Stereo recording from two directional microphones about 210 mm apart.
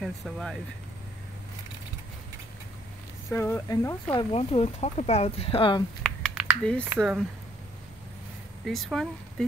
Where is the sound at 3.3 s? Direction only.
10° left (ahead or behind).